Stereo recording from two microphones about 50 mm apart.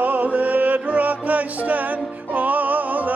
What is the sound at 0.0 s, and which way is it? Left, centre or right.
Music, right.